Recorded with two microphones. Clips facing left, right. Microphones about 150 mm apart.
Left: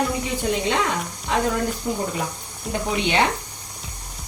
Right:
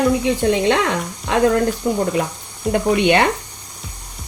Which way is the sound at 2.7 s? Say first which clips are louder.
Right 7 dB; 60° right (ahead or behind).